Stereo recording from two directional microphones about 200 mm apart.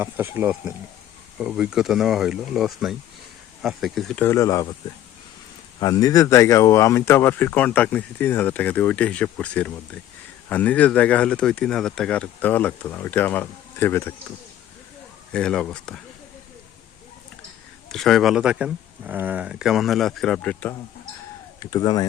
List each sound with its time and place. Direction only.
0.0 s speech: 10° right (ahead or behind); by 4.7 s 15° left (ahead or behind)
5.8 s speech: 20° left (ahead or behind)
15.3 s speech: 5° left (ahead or behind)
17.8 s speech: centre (ahead or behind)
21.6 s speech: 20° left (ahead or behind)